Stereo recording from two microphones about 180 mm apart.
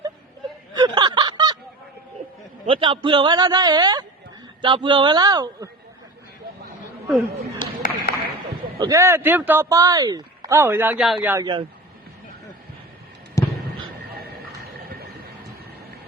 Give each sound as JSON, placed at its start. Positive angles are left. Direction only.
{"t": 0.8, "sound": "snicker", "side_deg": -25}
{"t": 2.6, "sound": "a man's voice", "side_deg": -30}
{"t": 7.6, "sound": "a sound", "side_deg": 50}
{"t": 8.8, "sound": "speech", "side_deg": -15}
{"t": 11.0, "sound": "a man's voice", "side_deg": 0}
{"t": 11.3, "sound": "a man's voice", "side_deg": -20}
{"t": 13.4, "sound": "a sound", "side_deg": 15}